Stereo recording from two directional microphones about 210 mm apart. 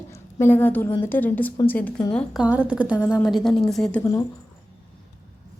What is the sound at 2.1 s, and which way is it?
Speech, 5° right (ahead or behind).